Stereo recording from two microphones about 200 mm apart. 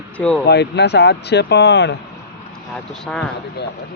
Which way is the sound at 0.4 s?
55° left (ahead or behind).